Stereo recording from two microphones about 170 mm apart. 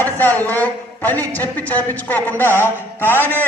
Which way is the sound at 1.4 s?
10° left (ahead or behind).